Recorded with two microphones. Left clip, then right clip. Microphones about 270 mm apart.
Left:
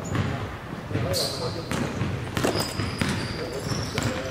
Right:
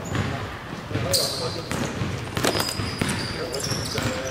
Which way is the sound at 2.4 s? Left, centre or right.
Centre.